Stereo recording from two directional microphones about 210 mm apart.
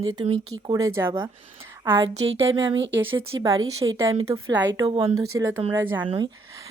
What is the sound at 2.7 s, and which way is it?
A woman's voice, 65° right (ahead or behind).